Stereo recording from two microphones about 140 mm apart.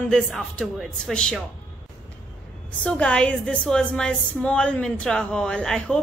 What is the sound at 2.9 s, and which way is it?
A woman's voice, 10° left (ahead or behind).